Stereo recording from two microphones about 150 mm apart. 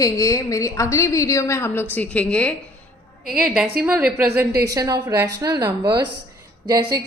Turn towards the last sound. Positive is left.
turn(degrees=-25)  # may be behind; listen again after turning